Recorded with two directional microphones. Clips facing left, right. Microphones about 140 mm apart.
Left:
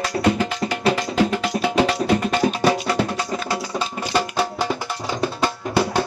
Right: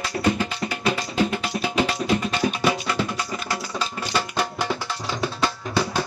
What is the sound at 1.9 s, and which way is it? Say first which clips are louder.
Music: left 4 dB; 40° left (ahead or behind).